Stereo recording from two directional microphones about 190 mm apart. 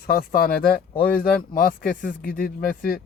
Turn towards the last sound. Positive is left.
turn(degrees=50)  # may be behind; listen again after turning